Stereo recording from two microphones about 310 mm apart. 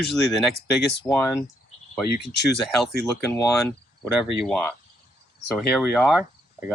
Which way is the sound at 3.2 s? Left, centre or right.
Centre.